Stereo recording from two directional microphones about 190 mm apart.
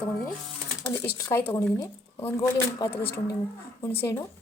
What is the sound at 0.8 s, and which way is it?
Speech, 15° left (ahead or behind).